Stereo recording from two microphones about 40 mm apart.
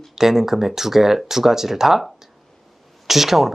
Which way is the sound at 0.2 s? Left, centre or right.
Centre.